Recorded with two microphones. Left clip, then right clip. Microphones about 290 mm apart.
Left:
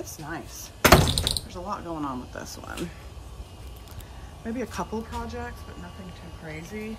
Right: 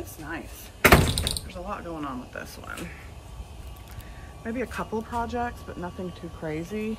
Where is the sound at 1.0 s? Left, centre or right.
Left.